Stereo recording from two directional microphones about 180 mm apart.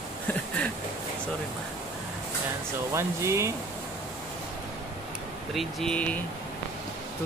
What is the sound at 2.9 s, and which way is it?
Speech, 15° right (ahead or behind).